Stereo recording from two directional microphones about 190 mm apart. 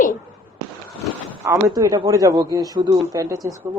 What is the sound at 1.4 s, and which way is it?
Speech, 20° right (ahead or behind).